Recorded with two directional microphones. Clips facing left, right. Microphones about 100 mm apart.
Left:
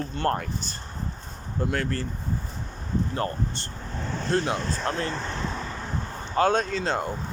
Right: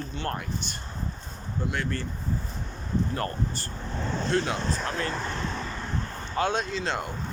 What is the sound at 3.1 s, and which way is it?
Speech, 25° left (ahead or behind).